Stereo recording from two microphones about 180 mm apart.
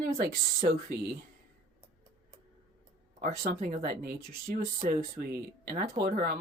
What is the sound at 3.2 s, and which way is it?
Speech, 50° right (ahead or behind).